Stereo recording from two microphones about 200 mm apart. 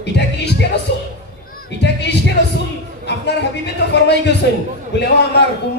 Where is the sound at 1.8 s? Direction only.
60° left (ahead or behind).